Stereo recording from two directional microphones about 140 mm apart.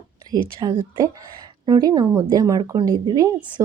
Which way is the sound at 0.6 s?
35° right (ahead or behind).